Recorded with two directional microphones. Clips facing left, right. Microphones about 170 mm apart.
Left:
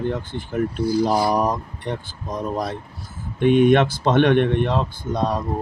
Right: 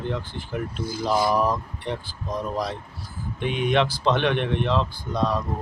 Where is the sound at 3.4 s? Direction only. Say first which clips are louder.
Left 8 dB; 50° left (ahead or behind).